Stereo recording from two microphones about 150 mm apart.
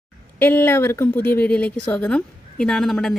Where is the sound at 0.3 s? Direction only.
15° left (ahead or behind).